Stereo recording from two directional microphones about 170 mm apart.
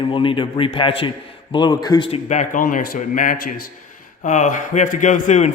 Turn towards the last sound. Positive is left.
turn(degrees=45)  # may be behind; listen again after turning